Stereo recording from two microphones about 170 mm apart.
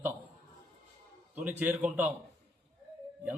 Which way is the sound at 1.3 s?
10° right (ahead or behind).